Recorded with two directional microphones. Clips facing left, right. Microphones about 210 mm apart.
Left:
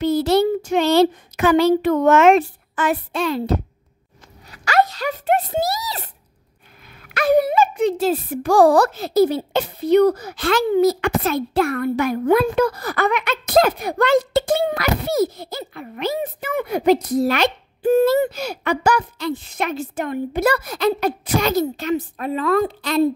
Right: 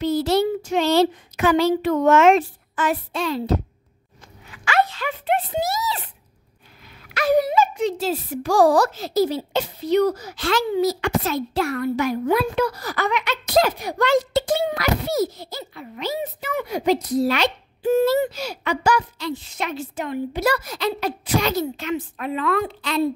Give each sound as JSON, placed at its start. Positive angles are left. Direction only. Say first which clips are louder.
{"t": 0.0, "sound": "speech", "louder": "left 3 dB", "side_deg": 55}
{"t": 4.5, "sound": "speech", "louder": "left 3 dB", "side_deg": 40}
{"t": 7.2, "sound": "speech", "louder": "left 2 dB", "side_deg": 55}